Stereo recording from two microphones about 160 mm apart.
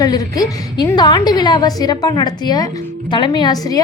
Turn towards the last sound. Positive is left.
turn(degrees=25)  # may be behind; listen again after turning